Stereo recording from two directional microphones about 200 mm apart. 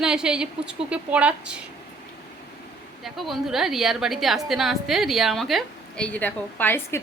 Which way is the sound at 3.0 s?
Centre (ahead or behind).